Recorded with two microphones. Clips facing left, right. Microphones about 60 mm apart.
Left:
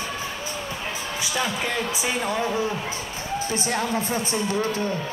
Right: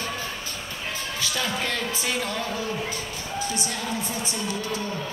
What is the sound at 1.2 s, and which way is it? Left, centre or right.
Speech, centre.